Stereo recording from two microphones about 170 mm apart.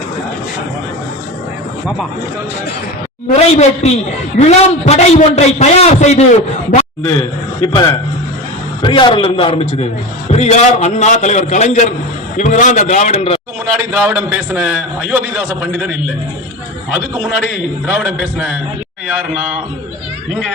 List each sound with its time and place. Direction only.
3.3 s a man's voice: 40° left (ahead or behind)
7.6 s a man's voice: 20° left (ahead or behind)
13.7 s a man's voice: 10° right (ahead or behind)
17.8 s a man's voice: 10° right (ahead or behind)